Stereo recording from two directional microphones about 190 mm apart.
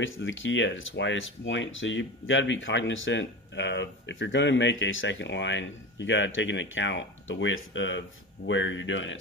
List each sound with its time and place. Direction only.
0.0 s speech: 90° left